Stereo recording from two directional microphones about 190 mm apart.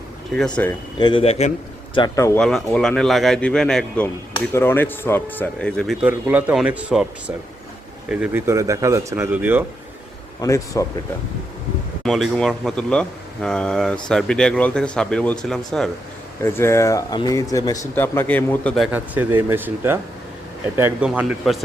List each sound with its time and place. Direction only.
0.3 s speech: 5° left (ahead or behind)
0.9 s speech: 25° left (ahead or behind)
2.0 s speech: 15° left (ahead or behind)
2.4 s speech: 5° left (ahead or behind)
10.4 s speech: 15° left (ahead or behind)
12.0 s speech: centre (ahead or behind)
16.4 s speech: 15° left (ahead or behind)
18.9 s speech: 10° right (ahead or behind)